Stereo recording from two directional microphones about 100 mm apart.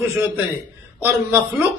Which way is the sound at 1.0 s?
20° right (ahead or behind).